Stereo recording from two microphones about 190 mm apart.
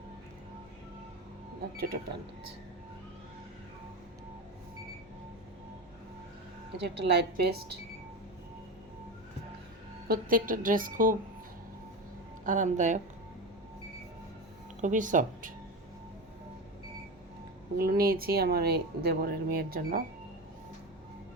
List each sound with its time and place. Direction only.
1.7 s speech: 55° right (ahead or behind)
6.7 s a woman's voice: 65° right (ahead or behind)
10.1 s speech: 45° right (ahead or behind)
12.5 s speech: 40° right (ahead or behind)
14.8 s speech: 40° right (ahead or behind)
17.7 s speech: 50° right (ahead or behind)